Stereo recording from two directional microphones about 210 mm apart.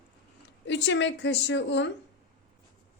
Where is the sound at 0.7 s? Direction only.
60° left (ahead or behind).